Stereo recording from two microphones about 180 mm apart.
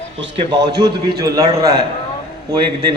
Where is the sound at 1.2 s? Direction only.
20° right (ahead or behind).